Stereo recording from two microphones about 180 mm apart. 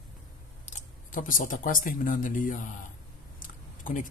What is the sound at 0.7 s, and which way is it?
Speech, 45° left (ahead or behind).